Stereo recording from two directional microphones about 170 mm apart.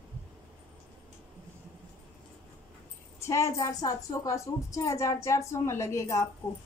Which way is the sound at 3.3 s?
15° left (ahead or behind).